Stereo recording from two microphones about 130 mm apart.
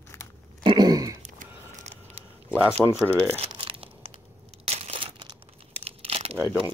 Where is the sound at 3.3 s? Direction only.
45° right (ahead or behind).